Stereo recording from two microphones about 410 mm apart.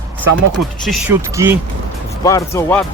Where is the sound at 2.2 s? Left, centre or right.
Centre.